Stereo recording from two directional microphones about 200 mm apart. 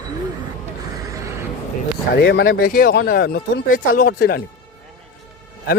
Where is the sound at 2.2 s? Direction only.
60° left (ahead or behind).